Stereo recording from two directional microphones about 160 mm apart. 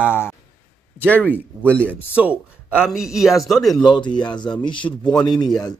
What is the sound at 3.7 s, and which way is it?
Speech, 30° left (ahead or behind).